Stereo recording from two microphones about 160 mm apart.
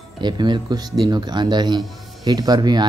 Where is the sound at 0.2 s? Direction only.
30° right (ahead or behind).